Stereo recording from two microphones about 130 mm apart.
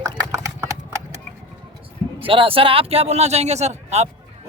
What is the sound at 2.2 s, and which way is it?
A man's voice, 45° right (ahead or behind).